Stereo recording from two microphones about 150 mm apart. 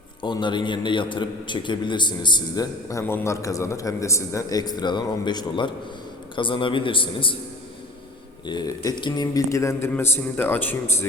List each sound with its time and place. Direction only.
0.2 s a man's voice: 30° left (ahead or behind)
3.0 s a man's voice: 15° left (ahead or behind); by 7.3 s 35° left (ahead or behind)
8.4 s a man's voice: 25° left (ahead or behind)